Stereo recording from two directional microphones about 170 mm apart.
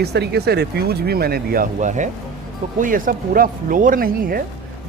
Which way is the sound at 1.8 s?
45° right (ahead or behind).